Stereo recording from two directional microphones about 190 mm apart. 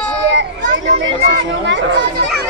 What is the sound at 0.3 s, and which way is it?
Children playing, 70° right (ahead or behind).